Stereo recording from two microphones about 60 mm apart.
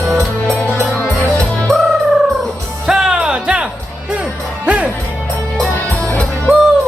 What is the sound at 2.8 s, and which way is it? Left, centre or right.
Music, centre.